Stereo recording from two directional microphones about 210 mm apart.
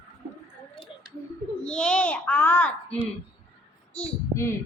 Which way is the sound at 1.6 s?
5° left (ahead or behind).